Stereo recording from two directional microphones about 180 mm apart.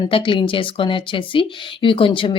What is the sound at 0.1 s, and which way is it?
Speech, 30° left (ahead or behind).